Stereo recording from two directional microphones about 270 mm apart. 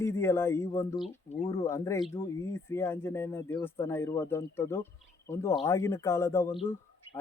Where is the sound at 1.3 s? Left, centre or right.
Left.